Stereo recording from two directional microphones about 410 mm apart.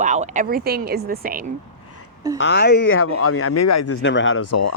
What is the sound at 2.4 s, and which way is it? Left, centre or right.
Speech, left.